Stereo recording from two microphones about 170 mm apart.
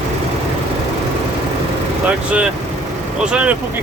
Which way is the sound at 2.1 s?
10° right (ahead or behind).